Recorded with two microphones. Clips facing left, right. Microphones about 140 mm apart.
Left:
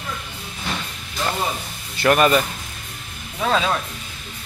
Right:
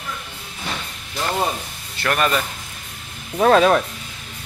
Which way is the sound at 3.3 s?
55° right (ahead or behind).